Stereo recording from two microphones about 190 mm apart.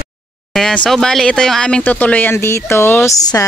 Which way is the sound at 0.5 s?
5° left (ahead or behind).